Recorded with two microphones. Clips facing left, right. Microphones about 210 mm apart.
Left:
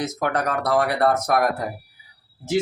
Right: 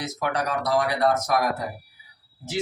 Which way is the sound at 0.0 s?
50° left (ahead or behind).